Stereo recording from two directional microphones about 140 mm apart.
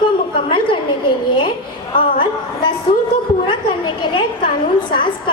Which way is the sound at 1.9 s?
90° left.